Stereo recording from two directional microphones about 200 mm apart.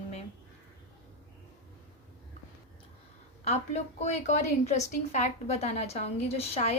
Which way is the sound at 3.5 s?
35° left (ahead or behind).